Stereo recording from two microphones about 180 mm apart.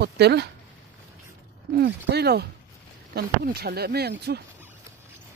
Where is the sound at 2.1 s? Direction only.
65° right (ahead or behind).